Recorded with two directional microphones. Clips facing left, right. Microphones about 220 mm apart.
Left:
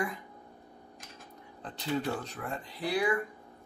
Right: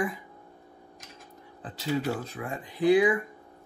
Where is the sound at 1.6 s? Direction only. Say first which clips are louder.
Right 3 dB; 5° right (ahead or behind).